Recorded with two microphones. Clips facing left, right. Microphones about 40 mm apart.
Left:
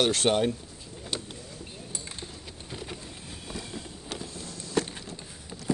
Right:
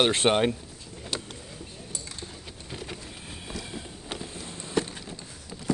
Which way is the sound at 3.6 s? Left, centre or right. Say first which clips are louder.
Right 1 dB; right.